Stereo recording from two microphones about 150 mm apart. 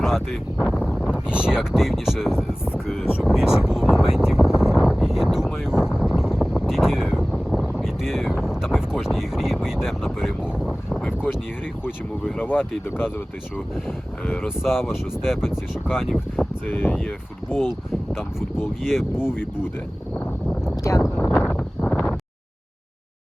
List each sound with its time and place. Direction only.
0.6 s speech: centre (ahead or behind)
2.7 s a sound: 5° right (ahead or behind)
4.8 s wind noise: centre (ahead or behind)
6.4 s a sound: centre (ahead or behind)
7.8 s wind noise: centre (ahead or behind)
12.2 s speech: 10° left (ahead or behind)
14.4 s speech: centre (ahead or behind)
16.6 s speech: 10° left (ahead or behind)
18.1 s speech: centre (ahead or behind)
19.1 s speech: 15° left (ahead or behind)
20.9 s speech: 20° left (ahead or behind)
21.2 s wind noise: 5° left (ahead or behind)